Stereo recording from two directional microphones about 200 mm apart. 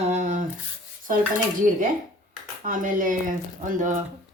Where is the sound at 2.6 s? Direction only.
40° right (ahead or behind).